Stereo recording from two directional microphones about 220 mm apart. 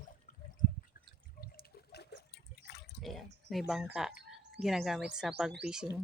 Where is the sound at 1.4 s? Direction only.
45° left (ahead or behind).